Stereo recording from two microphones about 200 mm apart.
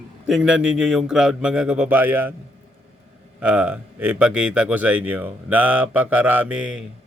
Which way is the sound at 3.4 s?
5° right (ahead or behind).